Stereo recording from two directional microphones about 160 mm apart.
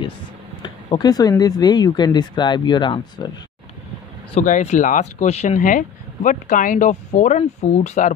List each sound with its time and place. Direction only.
0.6 s speech: 25° left (ahead or behind)
4.4 s speech: 50° left (ahead or behind)